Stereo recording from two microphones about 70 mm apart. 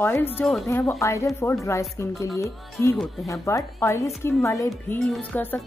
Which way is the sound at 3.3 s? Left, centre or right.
Left.